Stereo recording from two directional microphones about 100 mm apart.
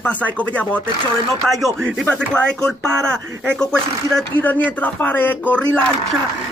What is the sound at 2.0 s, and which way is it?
Speech, 10° left (ahead or behind).